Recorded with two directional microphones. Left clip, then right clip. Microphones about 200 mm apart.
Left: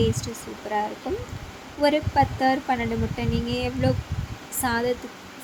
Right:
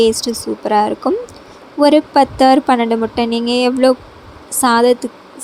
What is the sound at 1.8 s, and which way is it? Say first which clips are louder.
A woman's voice: right 10 dB; 40° right (ahead or behind).